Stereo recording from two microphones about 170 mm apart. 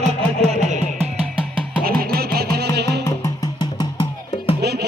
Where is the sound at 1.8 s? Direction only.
60° right (ahead or behind); by 3.0 s 80° right.